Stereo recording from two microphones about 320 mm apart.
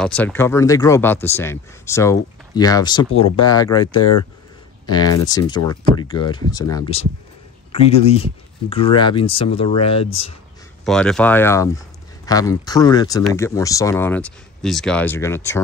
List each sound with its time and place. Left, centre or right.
0.0 s speech: centre
10.9 s speech: centre